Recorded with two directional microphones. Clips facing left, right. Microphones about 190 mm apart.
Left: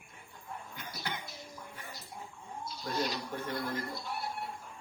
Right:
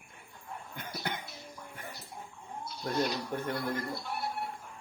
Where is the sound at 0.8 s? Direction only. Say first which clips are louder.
Right 5 dB; 55° right (ahead or behind).